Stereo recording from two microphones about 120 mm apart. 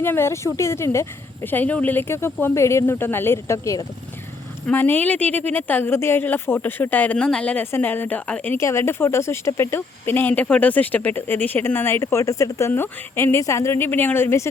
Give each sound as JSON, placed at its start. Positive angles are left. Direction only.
{"t": 0.0, "sound": "speech", "side_deg": 20}
{"t": 4.6, "sound": "speech", "side_deg": 15}